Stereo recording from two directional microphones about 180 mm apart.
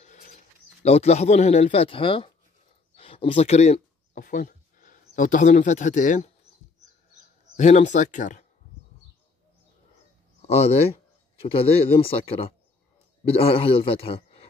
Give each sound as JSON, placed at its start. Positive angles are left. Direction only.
{"t": 0.8, "sound": "speech", "side_deg": 35}
{"t": 3.0, "sound": "a sound", "side_deg": 30}
{"t": 5.1, "sound": "speech", "side_deg": 45}
{"t": 7.5, "sound": "speech", "side_deg": 40}
{"t": 10.4, "sound": "a man's voice", "side_deg": 35}